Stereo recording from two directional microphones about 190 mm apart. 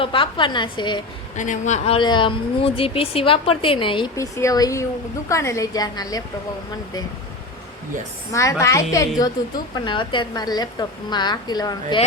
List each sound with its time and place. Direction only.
0.0 s speech: 25° left (ahead or behind)
1.4 s speech: 40° left (ahead or behind); by 6.2 s 20° left (ahead or behind)
8.3 s a woman's voice: 15° left (ahead or behind)